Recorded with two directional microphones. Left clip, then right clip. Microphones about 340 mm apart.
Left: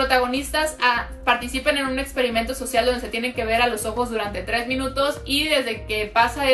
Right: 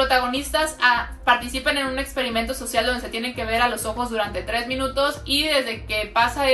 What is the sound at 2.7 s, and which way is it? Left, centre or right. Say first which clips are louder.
Speech: left 2 dB; centre.